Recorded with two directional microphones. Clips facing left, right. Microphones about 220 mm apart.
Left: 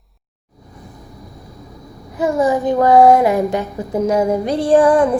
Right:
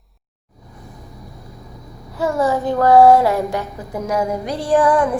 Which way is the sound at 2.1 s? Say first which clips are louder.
Left 3 dB; 15° left (ahead or behind).